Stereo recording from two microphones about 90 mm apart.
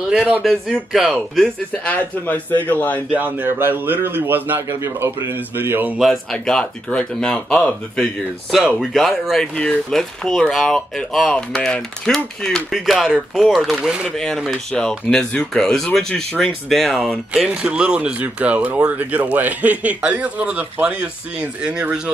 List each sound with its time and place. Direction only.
0.1 s speech: 10° right (ahead or behind)
1.7 s speech: 15° left (ahead or behind)
3.1 s a man's voice: 20° right (ahead or behind)
6.3 s speech: 10° left (ahead or behind); by 14.0 s 10° right (ahead or behind)
14.1 s speech: 5° left (ahead or behind)
17.3 s speech: 10° right (ahead or behind)